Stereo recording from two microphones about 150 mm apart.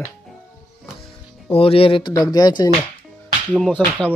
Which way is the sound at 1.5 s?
40° left (ahead or behind).